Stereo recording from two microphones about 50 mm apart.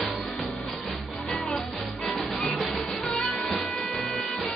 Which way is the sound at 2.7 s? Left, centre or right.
Centre.